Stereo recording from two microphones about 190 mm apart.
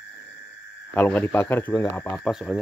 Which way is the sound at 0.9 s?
10° left (ahead or behind).